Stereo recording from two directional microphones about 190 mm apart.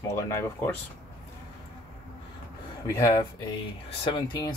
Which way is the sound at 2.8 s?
10° left (ahead or behind).